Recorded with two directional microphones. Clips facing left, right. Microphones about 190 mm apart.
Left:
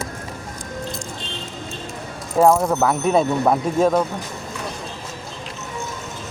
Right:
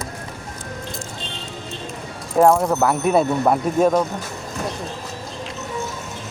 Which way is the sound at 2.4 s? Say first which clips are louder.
Even; 5° left (ahead or behind).